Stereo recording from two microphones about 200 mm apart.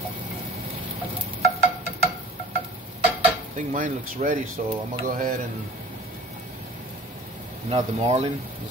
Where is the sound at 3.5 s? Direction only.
40° right (ahead or behind).